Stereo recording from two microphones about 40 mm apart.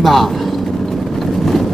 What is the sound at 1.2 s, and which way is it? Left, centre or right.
Vehicle, centre.